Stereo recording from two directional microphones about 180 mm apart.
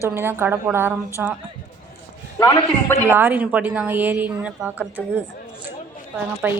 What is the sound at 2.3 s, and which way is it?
Speech, 15° left (ahead or behind).